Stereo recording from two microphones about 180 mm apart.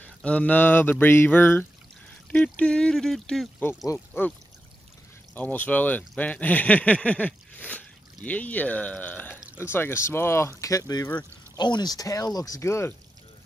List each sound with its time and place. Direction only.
0.0 s speech: 5° left (ahead or behind)
5.3 s speech: 10° left (ahead or behind)